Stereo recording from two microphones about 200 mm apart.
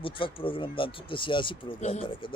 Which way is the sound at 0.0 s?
25° left (ahead or behind).